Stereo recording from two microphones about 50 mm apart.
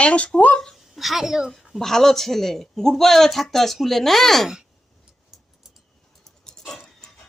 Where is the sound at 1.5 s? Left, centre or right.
Centre.